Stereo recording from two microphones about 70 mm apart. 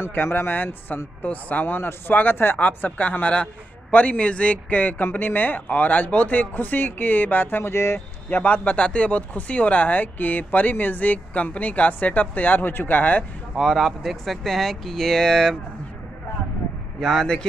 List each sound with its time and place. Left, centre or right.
0.0 s speech: left
8.3 s speech: left
13.6 s speech: centre
17.0 s speech: centre